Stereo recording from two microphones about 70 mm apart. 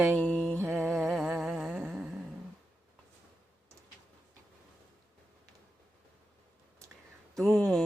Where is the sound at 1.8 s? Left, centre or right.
Centre.